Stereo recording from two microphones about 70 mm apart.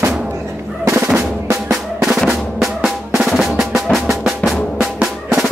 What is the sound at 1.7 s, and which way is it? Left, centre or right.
Drum, centre.